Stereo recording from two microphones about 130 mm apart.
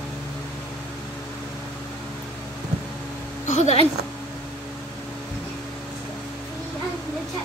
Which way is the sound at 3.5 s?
60° left (ahead or behind).